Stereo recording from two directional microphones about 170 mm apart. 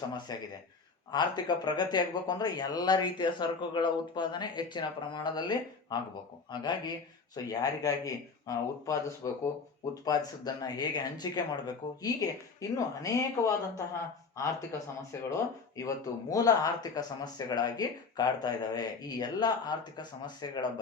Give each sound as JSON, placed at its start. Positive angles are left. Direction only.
{"t": 0.3, "sound": "speech", "side_deg": 20}
{"t": 15.1, "sound": "speech", "side_deg": 15}